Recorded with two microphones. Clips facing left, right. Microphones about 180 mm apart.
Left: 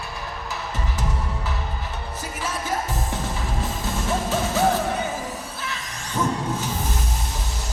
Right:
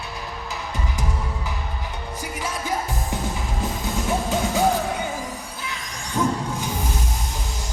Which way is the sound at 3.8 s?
15° right (ahead or behind).